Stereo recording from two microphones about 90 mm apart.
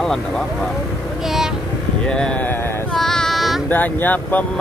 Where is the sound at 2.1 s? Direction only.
10° left (ahead or behind).